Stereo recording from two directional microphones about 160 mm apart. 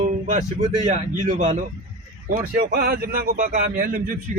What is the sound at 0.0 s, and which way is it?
Speech, 50° right (ahead or behind).